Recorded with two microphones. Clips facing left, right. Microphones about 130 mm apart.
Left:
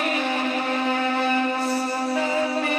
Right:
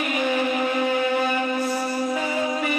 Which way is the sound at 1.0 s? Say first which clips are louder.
Right 1 dB; 35° left (ahead or behind).